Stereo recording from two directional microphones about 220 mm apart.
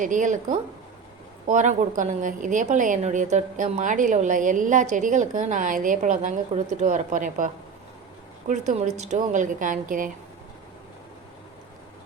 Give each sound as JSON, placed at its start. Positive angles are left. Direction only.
{"t": 0.0, "sound": "a woman's voice", "side_deg": -35}